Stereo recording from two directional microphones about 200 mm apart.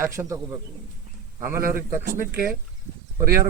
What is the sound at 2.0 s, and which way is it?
Speech, 50° right (ahead or behind).